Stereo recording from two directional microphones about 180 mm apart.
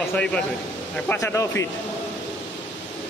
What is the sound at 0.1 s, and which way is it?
Speech, 5° left (ahead or behind).